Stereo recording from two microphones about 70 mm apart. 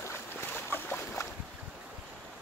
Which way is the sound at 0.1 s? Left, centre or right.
Left.